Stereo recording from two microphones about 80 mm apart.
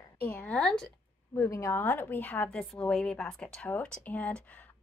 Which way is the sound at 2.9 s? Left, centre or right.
Centre.